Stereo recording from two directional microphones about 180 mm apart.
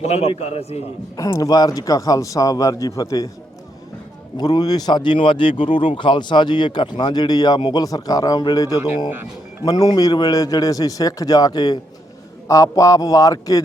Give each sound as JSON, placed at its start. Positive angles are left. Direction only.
{"t": 0.0, "sound": "a man's voice", "side_deg": 35}
{"t": 1.1, "sound": "speech", "side_deg": 20}
{"t": 4.4, "sound": "speech", "side_deg": 20}